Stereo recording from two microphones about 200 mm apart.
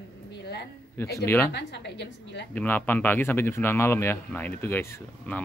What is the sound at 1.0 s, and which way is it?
Speech, 10° left (ahead or behind).